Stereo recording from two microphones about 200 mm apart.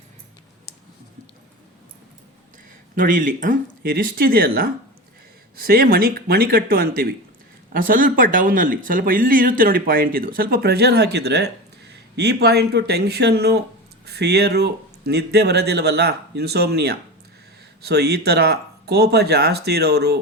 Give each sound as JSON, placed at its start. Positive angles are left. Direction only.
{"t": 2.9, "sound": "speech", "side_deg": -40}